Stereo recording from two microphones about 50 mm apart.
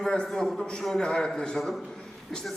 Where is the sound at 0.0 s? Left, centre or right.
Centre.